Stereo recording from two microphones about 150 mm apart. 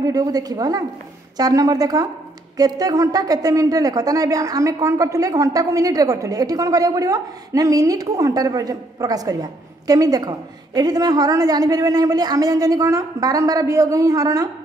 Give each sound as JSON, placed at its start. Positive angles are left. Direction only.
{"t": 0.0, "sound": "a woman's voice", "side_deg": -25}